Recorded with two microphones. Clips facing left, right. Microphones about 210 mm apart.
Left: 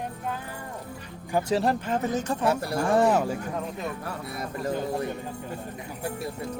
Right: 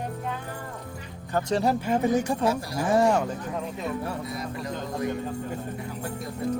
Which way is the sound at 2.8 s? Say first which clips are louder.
Right 1 dB; centre (ahead or behind).